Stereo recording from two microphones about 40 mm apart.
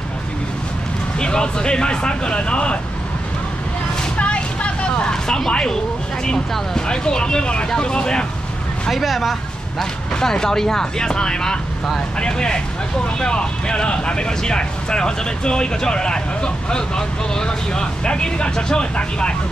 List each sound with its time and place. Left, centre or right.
1.2 s speech: left
4.2 s vehicle: left
5.1 s speech: centre
6.9 s speech: left
8.9 s speech: centre
9.8 s speech: centre